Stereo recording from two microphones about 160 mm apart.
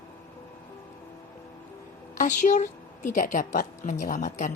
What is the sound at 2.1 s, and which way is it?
A woman's voice, 50° left (ahead or behind).